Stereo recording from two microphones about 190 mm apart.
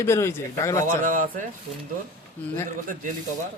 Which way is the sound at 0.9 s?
45° right (ahead or behind).